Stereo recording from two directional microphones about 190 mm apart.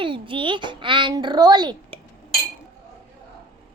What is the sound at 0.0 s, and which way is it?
A child's voice, 25° right (ahead or behind).